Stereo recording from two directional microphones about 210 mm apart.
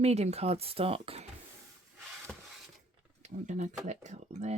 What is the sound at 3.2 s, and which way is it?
Speech, 35° right (ahead or behind).